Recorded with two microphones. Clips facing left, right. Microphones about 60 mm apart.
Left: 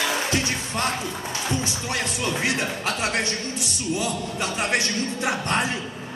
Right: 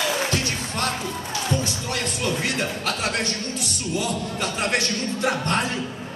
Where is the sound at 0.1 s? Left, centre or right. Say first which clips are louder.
Even; left.